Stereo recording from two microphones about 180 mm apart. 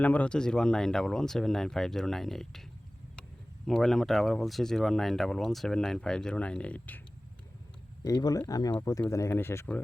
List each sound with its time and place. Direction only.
0.0 s speech: 10° left (ahead or behind)
3.7 s speech: centre (ahead or behind)
8.0 s speech: 20° left (ahead or behind)